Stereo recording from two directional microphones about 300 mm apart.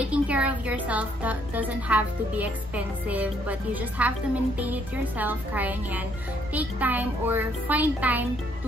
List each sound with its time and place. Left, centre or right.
0.0 s speech: centre